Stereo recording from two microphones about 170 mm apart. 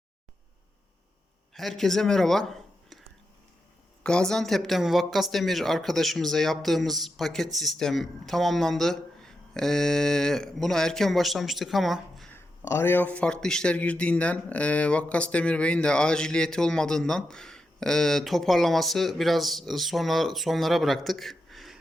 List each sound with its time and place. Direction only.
1.5 s speech: centre (ahead or behind)
4.0 s speech: 5° left (ahead or behind)
12.3 s speech: 15° left (ahead or behind); by 21.8 s centre (ahead or behind)